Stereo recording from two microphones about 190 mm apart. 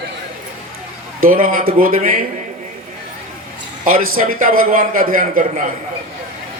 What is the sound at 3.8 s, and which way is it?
A man's voice, 50° right (ahead or behind).